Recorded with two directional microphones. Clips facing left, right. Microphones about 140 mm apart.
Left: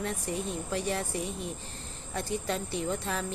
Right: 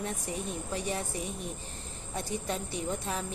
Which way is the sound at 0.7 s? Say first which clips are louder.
Left 3 dB; 15° right (ahead or behind).